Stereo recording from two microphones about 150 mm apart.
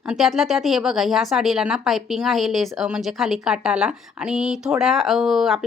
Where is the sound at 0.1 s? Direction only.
Centre (ahead or behind).